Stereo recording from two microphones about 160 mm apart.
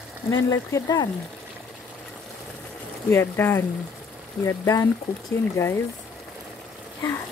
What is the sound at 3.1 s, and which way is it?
A woman's voice, 15° left (ahead or behind).